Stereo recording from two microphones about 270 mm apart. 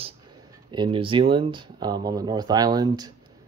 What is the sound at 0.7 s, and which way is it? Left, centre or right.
A man's voice, centre.